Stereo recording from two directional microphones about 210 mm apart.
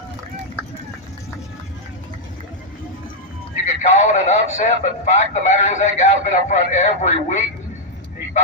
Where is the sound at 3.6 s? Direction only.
30° left (ahead or behind).